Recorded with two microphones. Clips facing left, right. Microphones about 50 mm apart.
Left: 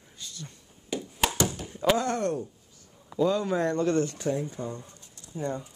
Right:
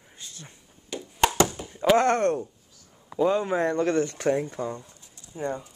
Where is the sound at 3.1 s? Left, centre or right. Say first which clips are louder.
Right 2 dB; right.